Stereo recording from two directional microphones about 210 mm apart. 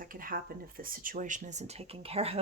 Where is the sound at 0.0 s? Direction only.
40° right (ahead or behind).